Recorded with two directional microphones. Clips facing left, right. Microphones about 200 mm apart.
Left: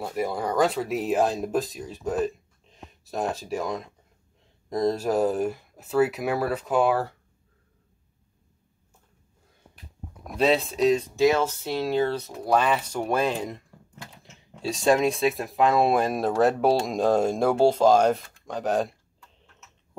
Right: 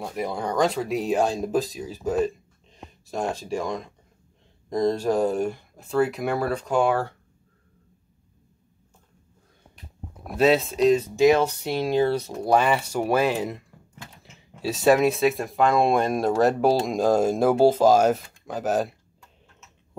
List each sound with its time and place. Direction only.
0.0 s speech: 5° left (ahead or behind)
10.2 s speech: 5° right (ahead or behind)
11.1 s speech: 15° right (ahead or behind)